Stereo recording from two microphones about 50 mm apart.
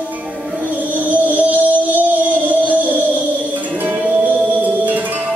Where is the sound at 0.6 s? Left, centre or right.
Right.